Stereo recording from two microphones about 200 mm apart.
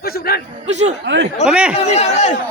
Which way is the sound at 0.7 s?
35° right (ahead or behind).